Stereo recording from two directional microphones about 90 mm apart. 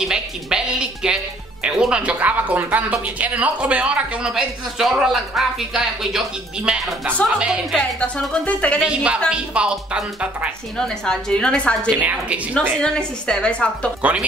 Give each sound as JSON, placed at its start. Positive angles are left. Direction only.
{"t": 0.0, "sound": "speech", "side_deg": -5}
{"t": 7.7, "sound": "a woman's voice", "side_deg": 5}
{"t": 8.8, "sound": "speech", "side_deg": -10}
{"t": 10.8, "sound": "a woman's voice", "side_deg": 10}
{"t": 12.0, "sound": "speech", "side_deg": -15}
{"t": 12.8, "sound": "a woman's voice", "side_deg": 10}
{"t": 14.0, "sound": "speech", "side_deg": -15}